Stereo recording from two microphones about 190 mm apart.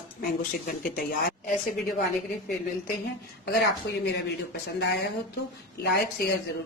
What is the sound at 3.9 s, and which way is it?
Speech, 65° left (ahead or behind).